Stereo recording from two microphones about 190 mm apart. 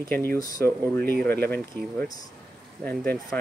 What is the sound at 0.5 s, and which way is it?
Speech, 10° left (ahead or behind).